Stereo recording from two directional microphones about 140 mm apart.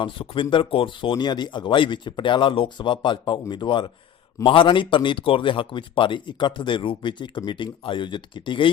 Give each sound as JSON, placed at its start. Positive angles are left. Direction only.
{"t": 0.0, "sound": "speech", "side_deg": 35}